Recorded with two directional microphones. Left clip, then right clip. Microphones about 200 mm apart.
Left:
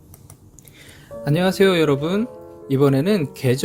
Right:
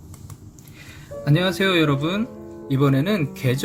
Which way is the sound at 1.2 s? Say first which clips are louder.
Left 3 dB; 35° left (ahead or behind).